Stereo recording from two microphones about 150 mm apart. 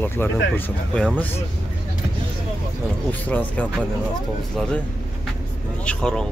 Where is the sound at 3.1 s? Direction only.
10° left (ahead or behind).